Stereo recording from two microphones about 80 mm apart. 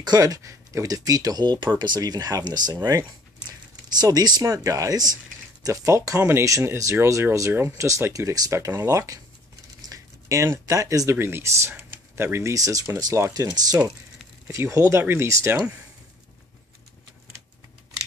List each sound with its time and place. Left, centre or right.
0.0 s speech: right
4.0 s speech: right
4.4 s speech: right
5.7 s speech: right
15.5 s speech: centre